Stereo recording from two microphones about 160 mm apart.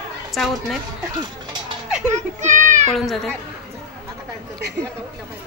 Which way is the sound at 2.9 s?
5° left (ahead or behind).